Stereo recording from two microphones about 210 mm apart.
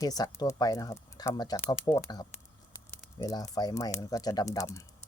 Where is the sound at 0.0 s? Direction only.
15° left (ahead or behind).